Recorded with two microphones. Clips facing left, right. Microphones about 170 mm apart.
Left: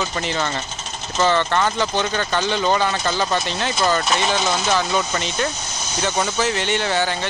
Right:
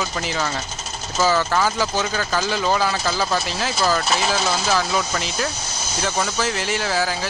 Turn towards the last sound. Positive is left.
turn(degrees=0)  # may be behind; listen again after turning